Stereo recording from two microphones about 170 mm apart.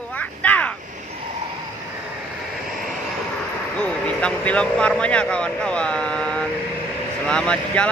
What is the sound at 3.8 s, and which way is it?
Speech, 5° left (ahead or behind).